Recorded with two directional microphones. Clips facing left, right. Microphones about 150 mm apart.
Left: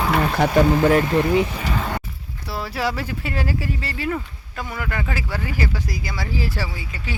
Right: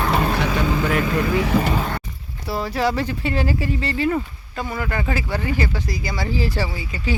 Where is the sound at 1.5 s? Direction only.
90° right.